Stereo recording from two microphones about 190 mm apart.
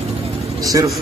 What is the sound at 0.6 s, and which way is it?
Speech, 20° right (ahead or behind).